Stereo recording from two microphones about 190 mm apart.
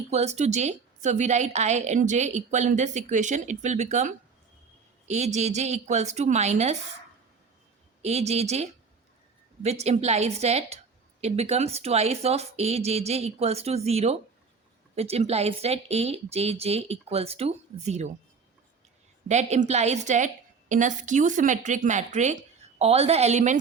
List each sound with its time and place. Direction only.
0.1 s a woman's voice: 35° right (ahead or behind)
8.0 s a woman's voice: 35° right (ahead or behind)
19.3 s a woman's voice: 35° right (ahead or behind)